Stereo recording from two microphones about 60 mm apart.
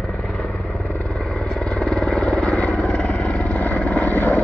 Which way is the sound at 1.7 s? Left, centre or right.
Centre.